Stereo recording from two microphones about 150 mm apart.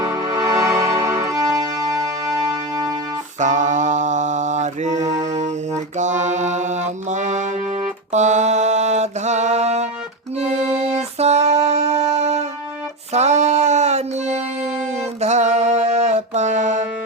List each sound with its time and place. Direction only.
0.2 s music: 25° right (ahead or behind)
3.4 s mantra: 55° right (ahead or behind)
10.3 s music: 45° right (ahead or behind)